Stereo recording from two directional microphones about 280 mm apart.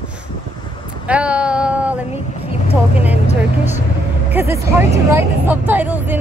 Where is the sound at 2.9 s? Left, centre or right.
Centre.